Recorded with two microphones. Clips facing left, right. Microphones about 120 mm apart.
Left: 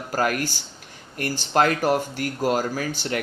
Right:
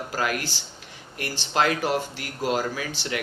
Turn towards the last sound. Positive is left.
turn(degrees=45)  # may be behind; listen again after turning